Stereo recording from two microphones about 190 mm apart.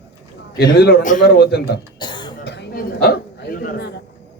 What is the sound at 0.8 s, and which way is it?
A man's voice, 55° left (ahead or behind).